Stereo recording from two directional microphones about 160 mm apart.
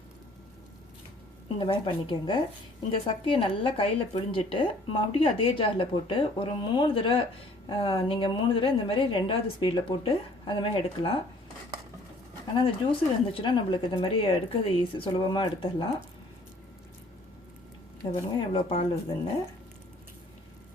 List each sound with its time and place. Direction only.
1.5 s a woman's voice: 30° left (ahead or behind)
12.5 s a woman's voice: 35° left (ahead or behind)
18.0 s a woman's voice: 35° left (ahead or behind)